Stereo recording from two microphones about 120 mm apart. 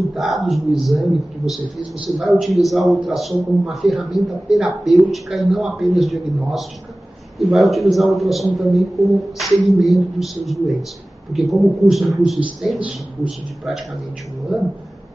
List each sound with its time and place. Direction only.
0.1 s a man's voice: centre (ahead or behind)